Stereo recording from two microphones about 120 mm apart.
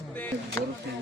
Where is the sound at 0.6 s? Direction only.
25° left (ahead or behind).